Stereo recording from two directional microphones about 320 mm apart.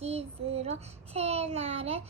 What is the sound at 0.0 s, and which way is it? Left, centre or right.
Child singing, centre.